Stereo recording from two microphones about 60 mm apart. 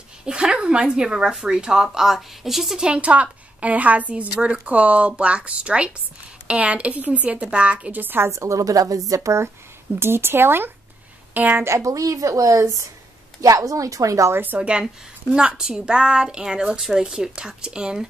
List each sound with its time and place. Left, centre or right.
0.2 s a woman's voice: centre
2.9 s a woman's voice: right
8.3 s a woman's voice: right
9.9 s speech: right
11.6 s a woman's voice: right
14.3 s speech: right
14.6 s a woman's voice: centre